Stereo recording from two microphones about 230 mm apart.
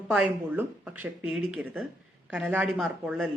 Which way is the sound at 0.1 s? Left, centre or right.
Centre.